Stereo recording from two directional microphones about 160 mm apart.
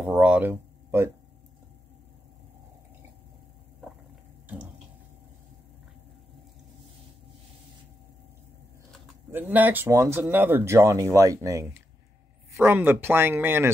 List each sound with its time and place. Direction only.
0.0 s speech: 5° right (ahead or behind)
9.3 s speech: 10° right (ahead or behind)